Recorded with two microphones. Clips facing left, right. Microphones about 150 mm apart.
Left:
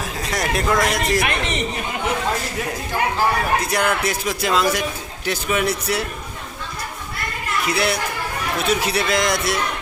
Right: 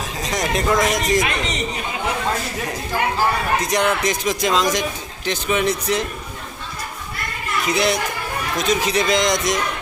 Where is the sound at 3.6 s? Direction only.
5° left (ahead or behind).